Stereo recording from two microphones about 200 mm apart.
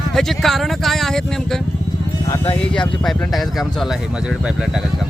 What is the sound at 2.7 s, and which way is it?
Speech, 5° left (ahead or behind).